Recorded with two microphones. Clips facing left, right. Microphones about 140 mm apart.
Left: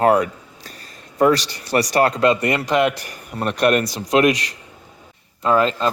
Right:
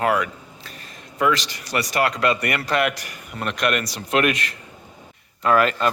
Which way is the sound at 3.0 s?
35° left (ahead or behind).